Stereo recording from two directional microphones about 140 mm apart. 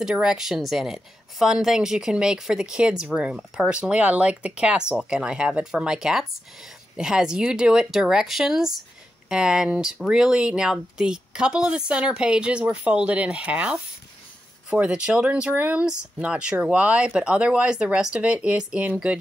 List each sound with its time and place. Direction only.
0.0 s a woman's voice: 5° right (ahead or behind)